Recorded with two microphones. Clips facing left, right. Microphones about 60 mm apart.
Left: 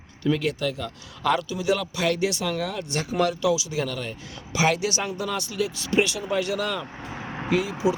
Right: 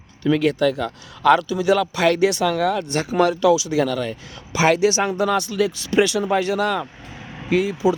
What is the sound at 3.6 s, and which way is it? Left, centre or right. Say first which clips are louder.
Speech: right 8 dB; right.